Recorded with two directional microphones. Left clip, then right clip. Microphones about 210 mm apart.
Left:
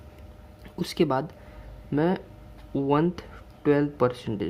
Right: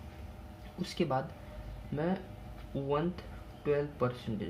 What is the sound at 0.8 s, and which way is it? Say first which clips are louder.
Speech: left 8 dB; 50° left (ahead or behind).